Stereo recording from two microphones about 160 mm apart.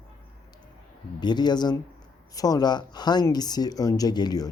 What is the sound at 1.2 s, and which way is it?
Speech, 25° left (ahead or behind).